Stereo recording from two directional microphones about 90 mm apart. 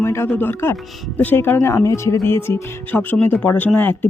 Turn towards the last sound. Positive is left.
turn(degrees=20)  # may be behind; listen again after turning